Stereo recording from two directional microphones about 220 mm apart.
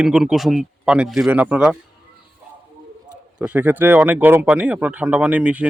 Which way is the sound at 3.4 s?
5° right (ahead or behind).